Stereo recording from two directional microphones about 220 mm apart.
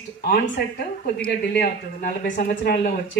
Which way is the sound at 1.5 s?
40° left (ahead or behind).